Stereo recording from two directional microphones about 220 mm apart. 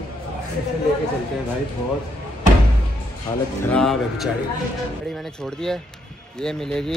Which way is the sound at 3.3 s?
20° left (ahead or behind).